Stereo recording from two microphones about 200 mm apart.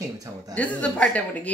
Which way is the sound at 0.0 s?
15° right (ahead or behind).